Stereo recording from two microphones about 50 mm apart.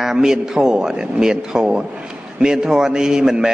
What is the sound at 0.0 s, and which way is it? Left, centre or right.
A man's voice, centre.